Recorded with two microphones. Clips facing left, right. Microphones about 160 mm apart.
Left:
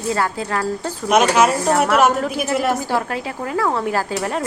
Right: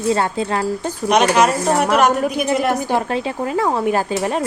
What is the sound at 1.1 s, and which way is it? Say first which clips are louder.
Speech: even; 5° left (ahead or behind).